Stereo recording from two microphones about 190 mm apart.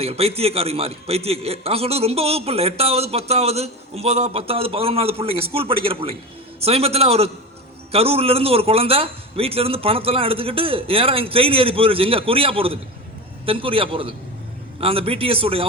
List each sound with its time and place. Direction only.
0.0 s a man's voice: 30° right (ahead or behind)